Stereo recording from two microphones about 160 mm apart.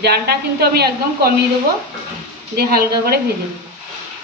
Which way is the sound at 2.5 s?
75° right (ahead or behind).